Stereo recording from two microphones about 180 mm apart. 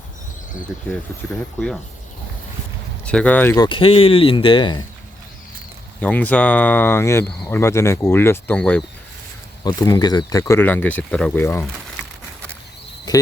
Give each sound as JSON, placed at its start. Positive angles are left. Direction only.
{"t": 1.3, "sound": "speech", "side_deg": 5}
{"t": 3.1, "sound": "speech", "side_deg": 5}
{"t": 6.0, "sound": "speech", "side_deg": 5}
{"t": 13.1, "sound": "cricket", "side_deg": 20}